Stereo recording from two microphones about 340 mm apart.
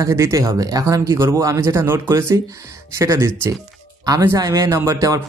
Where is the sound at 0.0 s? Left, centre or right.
Centre.